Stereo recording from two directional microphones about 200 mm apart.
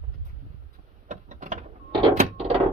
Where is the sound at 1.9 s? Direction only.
30° right (ahead or behind).